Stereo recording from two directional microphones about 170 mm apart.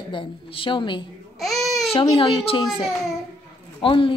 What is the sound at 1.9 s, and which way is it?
A woman's voice, 35° left (ahead or behind).